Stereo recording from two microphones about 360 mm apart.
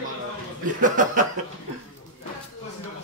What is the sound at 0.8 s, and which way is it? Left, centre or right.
Speech, right.